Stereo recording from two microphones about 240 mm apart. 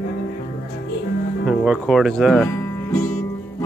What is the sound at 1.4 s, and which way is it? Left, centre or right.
Speech, centre.